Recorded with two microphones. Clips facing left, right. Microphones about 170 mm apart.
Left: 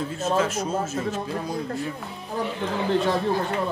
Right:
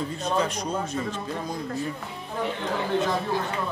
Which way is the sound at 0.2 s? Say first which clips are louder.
Left 4 dB; 5° left (ahead or behind).